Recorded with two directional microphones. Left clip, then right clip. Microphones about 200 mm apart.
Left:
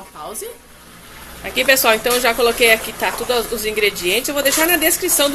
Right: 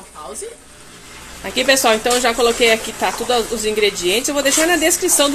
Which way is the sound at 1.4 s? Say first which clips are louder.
Even; 30° right (ahead or behind).